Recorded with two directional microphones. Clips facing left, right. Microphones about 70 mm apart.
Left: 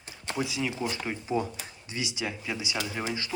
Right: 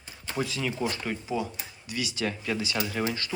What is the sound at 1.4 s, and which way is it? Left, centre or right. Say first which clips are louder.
Speech: left 3 dB; left.